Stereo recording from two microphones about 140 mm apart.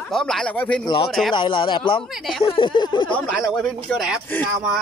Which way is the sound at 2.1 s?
Centre (ahead or behind).